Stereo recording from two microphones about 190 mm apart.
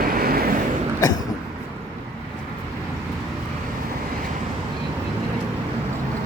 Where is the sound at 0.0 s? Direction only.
50° right (ahead or behind).